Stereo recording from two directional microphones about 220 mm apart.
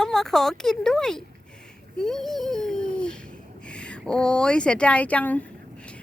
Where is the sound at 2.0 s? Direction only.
Centre (ahead or behind).